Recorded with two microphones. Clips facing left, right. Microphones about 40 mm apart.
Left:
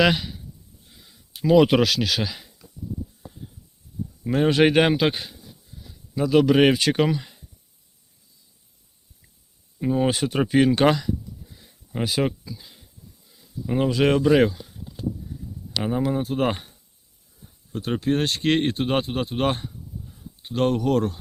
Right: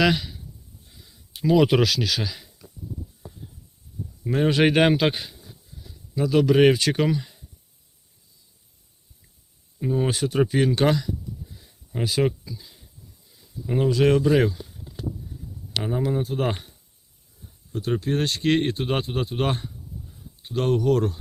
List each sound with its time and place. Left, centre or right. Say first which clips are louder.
0.0 s speech: left 1 dB; left
1.5 s speech: left 2 dB; centre
1.8 s speech: left 1 dB; left
4.3 s speech: left 2 dB; centre
5.8 s a sound: left 1 dB; centre
6.3 s speech: even; left
9.8 s speech: left 2 dB; left
10.1 s speech: even; left
11.9 s speech: left 1 dB; left
12.5 s a sound: right 1 dB; left
13.7 s speech: right 1 dB; left
15.8 s speech: left 2 dB; centre
17.7 s a sound: right 1 dB; left
18.0 s speech: left 4 dB; left